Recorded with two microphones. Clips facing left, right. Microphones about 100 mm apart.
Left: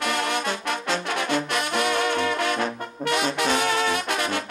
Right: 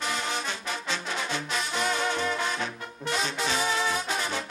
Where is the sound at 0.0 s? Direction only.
65° left (ahead or behind).